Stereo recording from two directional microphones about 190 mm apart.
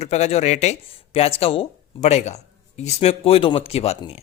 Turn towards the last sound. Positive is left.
turn(degrees=30)  # may be behind; listen again after turning